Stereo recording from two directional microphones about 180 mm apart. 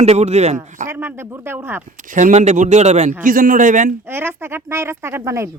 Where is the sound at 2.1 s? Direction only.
40° right (ahead or behind).